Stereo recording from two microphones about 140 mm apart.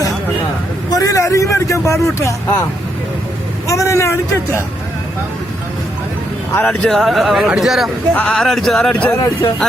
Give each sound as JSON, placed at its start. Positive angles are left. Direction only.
{"t": 0.9, "sound": "vehicle", "side_deg": 25}
{"t": 3.7, "sound": "speech", "side_deg": 20}
{"t": 6.7, "sound": "speech", "side_deg": 0}